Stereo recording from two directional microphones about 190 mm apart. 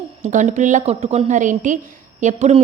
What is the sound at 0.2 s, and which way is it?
A woman's voice, 40° right (ahead or behind).